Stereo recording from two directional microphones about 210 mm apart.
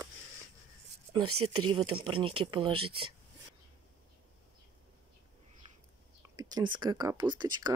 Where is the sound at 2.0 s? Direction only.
25° right (ahead or behind).